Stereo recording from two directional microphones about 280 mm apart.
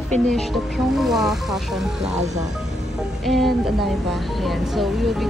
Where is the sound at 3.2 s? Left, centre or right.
Centre.